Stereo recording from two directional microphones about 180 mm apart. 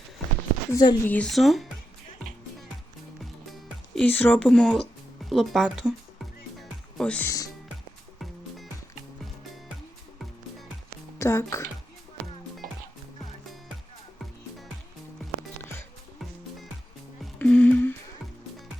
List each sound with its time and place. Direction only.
0.7 s speech: 20° left (ahead or behind)
1.1 s speech: 5° left (ahead or behind)
3.2 s music: centre (ahead or behind)
11.2 s speech: 15° left (ahead or behind)
17.3 s music: 5° left (ahead or behind)